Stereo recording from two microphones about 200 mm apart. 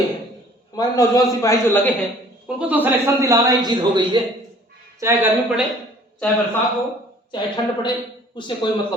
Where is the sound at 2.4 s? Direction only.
10° right (ahead or behind).